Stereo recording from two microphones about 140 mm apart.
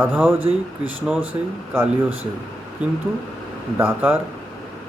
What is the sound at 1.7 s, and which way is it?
Speech, 15° right (ahead or behind).